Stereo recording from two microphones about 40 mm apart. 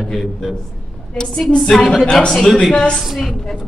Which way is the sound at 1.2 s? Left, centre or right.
Centre.